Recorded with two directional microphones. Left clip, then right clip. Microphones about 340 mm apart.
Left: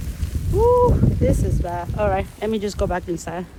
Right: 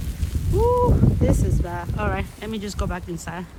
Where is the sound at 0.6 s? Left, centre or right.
Centre.